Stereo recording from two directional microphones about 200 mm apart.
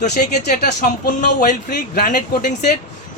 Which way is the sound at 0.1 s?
50° left (ahead or behind).